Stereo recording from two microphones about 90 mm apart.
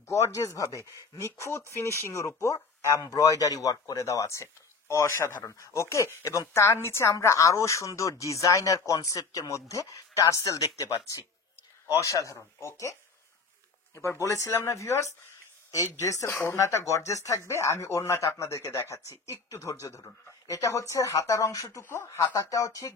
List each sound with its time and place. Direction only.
0.1 s speech: 35° left (ahead or behind)
13.9 s speech: 35° left (ahead or behind)
21.8 s speech: 30° left (ahead or behind)